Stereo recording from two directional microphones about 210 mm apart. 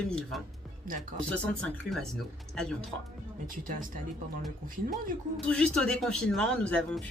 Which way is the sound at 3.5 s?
40° right (ahead or behind).